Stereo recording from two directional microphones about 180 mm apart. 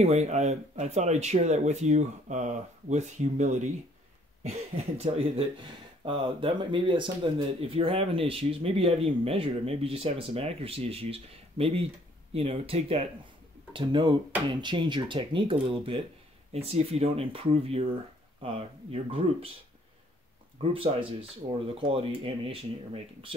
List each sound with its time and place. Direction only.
0.0 s speech: 35° right (ahead or behind)
4.9 s speech: 35° right (ahead or behind)
21.2 s speech: 30° right (ahead or behind)